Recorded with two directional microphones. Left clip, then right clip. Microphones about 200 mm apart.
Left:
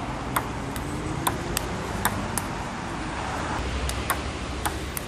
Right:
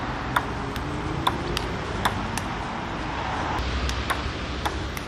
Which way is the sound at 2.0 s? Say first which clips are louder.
Right 2 dB; 5° right (ahead or behind).